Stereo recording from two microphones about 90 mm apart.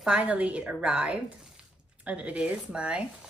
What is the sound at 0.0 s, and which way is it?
A woman's voice, 15° right (ahead or behind).